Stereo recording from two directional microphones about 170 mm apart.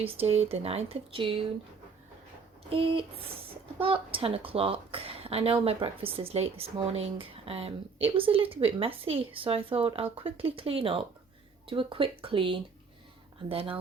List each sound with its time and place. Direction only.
0.0 s speech: 35° right (ahead or behind)
2.6 s speech: 30° right (ahead or behind)